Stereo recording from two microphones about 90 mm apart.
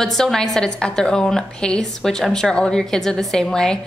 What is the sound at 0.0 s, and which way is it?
A woman's voice, 5° left (ahead or behind).